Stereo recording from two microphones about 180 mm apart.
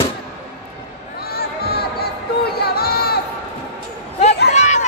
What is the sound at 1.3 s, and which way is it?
Music, 60° left (ahead or behind).